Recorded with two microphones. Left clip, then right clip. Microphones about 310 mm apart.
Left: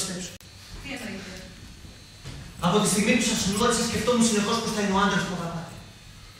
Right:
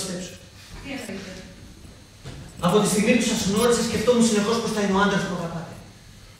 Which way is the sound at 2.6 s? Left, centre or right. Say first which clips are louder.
Right 3 dB; left.